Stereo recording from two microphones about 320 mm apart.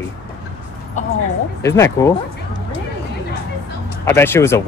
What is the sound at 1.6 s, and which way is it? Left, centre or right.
Speech, centre.